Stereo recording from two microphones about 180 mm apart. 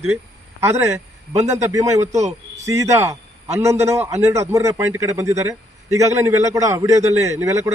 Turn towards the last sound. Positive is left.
turn(degrees=-15)  # may be behind; listen again after turning